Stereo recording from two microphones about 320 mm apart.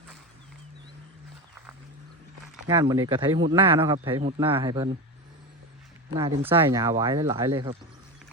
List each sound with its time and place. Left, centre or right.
2.6 s speech: centre
6.4 s speech: centre